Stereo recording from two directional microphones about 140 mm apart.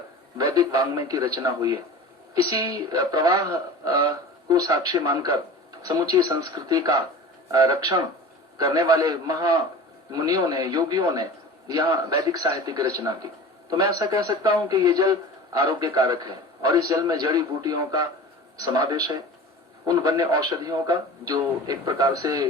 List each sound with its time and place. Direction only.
0.3 s a man's voice: 25° right (ahead or behind)